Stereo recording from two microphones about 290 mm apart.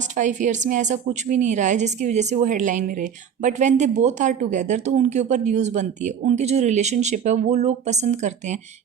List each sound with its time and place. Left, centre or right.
0.2 s a woman's voice: right